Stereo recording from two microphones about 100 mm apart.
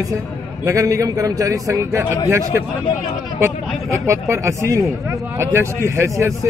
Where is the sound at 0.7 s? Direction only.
30° right (ahead or behind).